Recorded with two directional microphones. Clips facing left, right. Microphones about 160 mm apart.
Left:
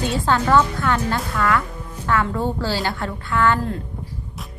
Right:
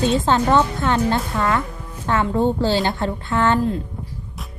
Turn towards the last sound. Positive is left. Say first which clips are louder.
# right 1 dB
turn(degrees=-25)  # may be behind; listen again after turning